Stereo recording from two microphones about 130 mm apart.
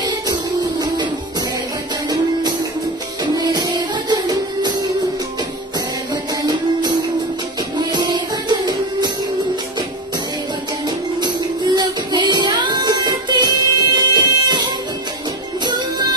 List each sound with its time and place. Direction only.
0.0 s music: 30° right (ahead or behind)
3.3 s music: 30° right (ahead or behind)
6.4 s music: 25° right (ahead or behind)
11.1 s music: 35° right (ahead or behind)